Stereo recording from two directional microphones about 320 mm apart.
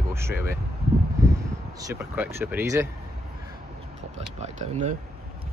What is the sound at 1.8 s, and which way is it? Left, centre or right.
Speech, centre.